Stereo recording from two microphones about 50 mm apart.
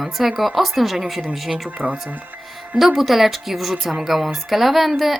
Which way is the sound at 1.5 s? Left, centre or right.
Right.